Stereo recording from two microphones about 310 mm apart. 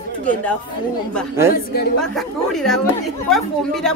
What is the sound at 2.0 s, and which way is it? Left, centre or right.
Speech, centre.